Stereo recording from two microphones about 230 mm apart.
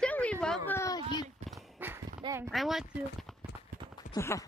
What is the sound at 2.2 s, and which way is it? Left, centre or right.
Speech, centre.